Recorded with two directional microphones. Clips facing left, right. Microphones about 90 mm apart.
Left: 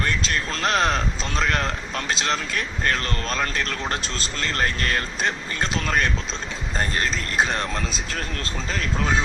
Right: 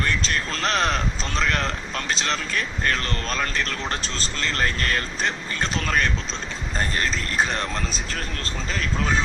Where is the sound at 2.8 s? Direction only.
40° left (ahead or behind).